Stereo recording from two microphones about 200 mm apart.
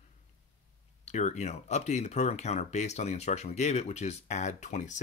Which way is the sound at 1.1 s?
35° left (ahead or behind).